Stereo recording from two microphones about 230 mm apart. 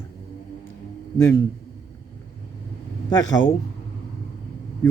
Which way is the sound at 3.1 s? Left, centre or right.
Centre.